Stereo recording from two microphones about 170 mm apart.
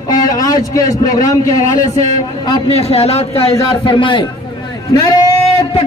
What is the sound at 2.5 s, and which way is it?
A man's voice, 35° left (ahead or behind).